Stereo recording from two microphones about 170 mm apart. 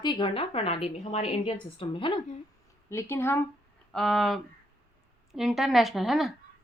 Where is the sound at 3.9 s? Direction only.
Centre (ahead or behind).